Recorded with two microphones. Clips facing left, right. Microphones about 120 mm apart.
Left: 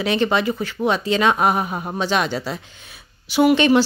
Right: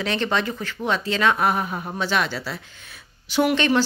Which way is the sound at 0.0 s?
10° left (ahead or behind).